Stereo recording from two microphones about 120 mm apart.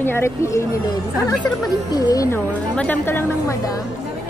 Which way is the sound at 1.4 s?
35° left (ahead or behind).